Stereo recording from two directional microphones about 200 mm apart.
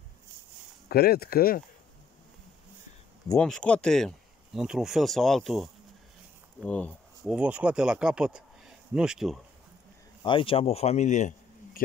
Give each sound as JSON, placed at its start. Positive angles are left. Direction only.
{"t": 0.8, "sound": "speech", "side_deg": 50}
{"t": 3.3, "sound": "speech", "side_deg": 5}
{"t": 7.3, "sound": "speech", "side_deg": -5}
{"t": 10.2, "sound": "speech", "side_deg": 25}